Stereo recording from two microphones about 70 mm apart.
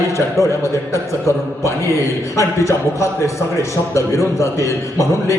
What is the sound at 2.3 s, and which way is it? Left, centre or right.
A man's voice, left.